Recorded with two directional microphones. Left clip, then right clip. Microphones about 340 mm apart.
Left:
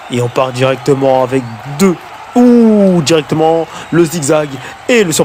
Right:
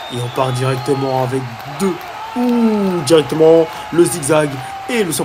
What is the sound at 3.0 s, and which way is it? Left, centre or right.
Speech, left.